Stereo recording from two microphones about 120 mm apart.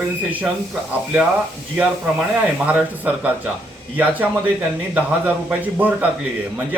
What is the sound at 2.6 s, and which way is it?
Speech, 15° right (ahead or behind).